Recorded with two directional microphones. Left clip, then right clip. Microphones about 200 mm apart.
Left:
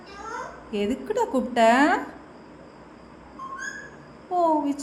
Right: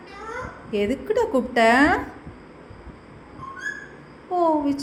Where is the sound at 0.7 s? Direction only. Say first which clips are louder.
Right 4 dB; centre (ahead or behind).